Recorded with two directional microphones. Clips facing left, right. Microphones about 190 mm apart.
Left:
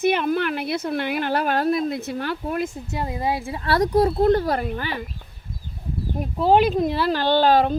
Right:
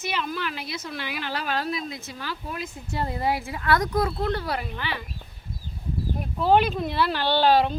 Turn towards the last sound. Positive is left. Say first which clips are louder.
# left 3 dB
turn(degrees=45)  # may be behind; listen again after turning